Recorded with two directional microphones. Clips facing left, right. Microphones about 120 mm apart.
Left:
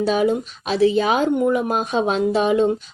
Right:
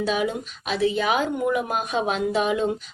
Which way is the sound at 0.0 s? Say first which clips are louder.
Left 6 dB; 35° left (ahead or behind).